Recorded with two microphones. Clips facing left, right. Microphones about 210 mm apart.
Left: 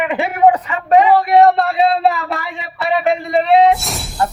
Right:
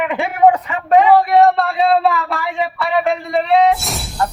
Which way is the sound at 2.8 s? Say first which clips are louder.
Left 3 dB; 20° left (ahead or behind).